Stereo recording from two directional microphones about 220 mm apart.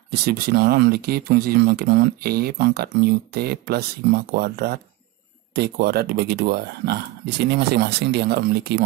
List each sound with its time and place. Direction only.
0.1 s speech: 45° right (ahead or behind)